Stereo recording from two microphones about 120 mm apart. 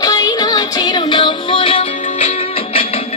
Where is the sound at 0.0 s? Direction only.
30° left (ahead or behind); by 2.3 s 55° left (ahead or behind).